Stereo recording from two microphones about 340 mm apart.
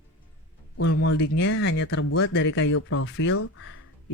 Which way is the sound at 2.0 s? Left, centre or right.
Left.